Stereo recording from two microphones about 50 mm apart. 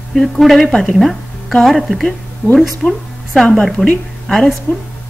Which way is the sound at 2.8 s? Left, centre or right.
Left.